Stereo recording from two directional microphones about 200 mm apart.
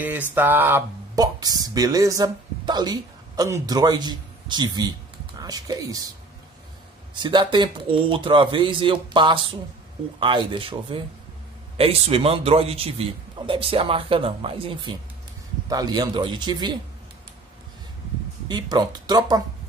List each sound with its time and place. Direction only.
0.3 s speech: 10° right (ahead or behind)
7.2 s a man's voice: 25° right (ahead or behind)
18.5 s a man's voice: 20° right (ahead or behind)